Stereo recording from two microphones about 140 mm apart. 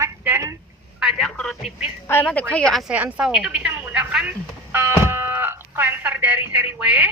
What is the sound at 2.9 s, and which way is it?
Telephone, 10° right (ahead or behind).